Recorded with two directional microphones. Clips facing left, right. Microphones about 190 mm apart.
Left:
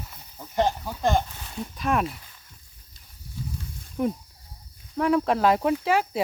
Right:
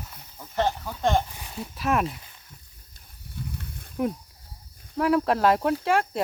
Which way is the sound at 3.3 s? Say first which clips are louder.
Left 1 dB; 60° right (ahead or behind).